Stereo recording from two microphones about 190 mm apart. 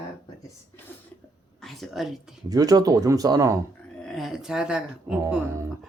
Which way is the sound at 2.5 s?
20° right (ahead or behind).